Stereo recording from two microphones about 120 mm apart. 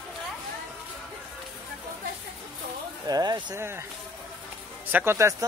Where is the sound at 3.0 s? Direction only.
35° right (ahead or behind).